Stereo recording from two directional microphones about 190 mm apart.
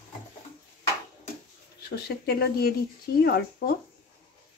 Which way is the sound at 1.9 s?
55° left (ahead or behind).